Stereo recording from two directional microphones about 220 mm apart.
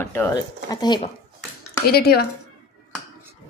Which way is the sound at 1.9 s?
45° left (ahead or behind).